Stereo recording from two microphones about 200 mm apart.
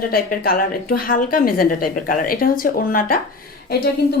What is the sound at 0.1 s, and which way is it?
A woman's voice, 45° left (ahead or behind).